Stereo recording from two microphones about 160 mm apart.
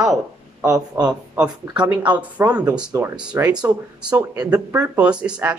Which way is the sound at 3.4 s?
20° right (ahead or behind).